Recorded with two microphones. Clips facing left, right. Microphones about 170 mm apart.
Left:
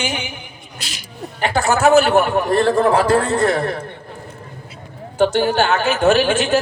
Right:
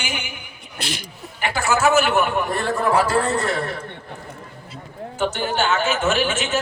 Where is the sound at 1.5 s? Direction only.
40° left (ahead or behind).